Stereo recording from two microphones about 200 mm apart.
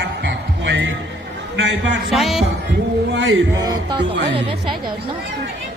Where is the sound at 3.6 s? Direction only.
20° right (ahead or behind).